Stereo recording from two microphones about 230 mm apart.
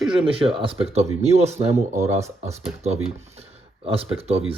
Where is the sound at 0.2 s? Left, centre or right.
Right.